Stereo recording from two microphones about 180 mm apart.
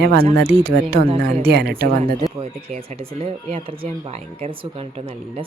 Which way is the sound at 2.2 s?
35° right (ahead or behind).